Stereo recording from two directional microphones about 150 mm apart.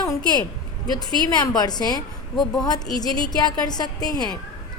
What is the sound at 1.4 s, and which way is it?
Speech, 25° left (ahead or behind).